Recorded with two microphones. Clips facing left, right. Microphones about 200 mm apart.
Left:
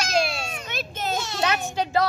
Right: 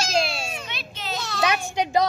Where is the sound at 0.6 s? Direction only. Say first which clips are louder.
Left 5 dB; 45° left (ahead or behind).